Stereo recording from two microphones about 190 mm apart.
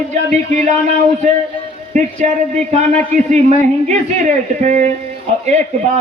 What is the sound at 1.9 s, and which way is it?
A man's voice, 40° right (ahead or behind).